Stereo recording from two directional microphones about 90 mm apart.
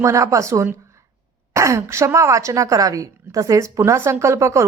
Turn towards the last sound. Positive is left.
turn(degrees=-35)  # may be behind; listen again after turning